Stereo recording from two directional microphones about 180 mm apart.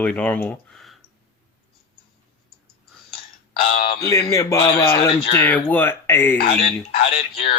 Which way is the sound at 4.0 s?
20° left (ahead or behind).